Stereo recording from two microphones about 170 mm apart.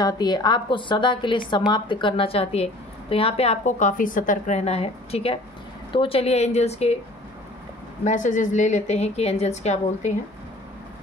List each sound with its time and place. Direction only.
0.0 s a woman's voice: 25° left (ahead or behind)
8.0 s a woman's voice: 45° left (ahead or behind)